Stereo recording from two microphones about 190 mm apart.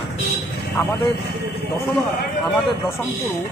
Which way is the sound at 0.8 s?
15° left (ahead or behind).